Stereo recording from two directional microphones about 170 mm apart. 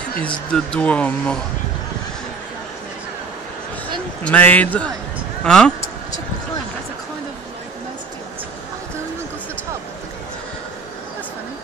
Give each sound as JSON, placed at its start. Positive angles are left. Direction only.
{"t": 0.5, "sound": "speech", "side_deg": 5}
{"t": 4.2, "sound": "speech", "side_deg": 10}